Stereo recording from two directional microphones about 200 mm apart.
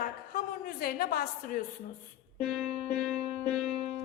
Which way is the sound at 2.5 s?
Centre (ahead or behind).